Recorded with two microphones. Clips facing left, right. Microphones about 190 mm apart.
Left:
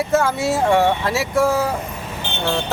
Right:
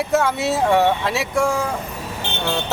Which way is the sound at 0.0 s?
Centre (ahead or behind).